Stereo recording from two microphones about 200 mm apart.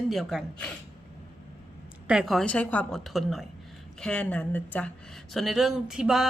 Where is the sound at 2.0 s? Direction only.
5° right (ahead or behind).